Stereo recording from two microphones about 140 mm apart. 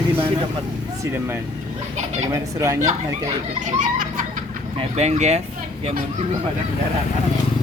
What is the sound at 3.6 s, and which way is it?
Speech, 65° right (ahead or behind).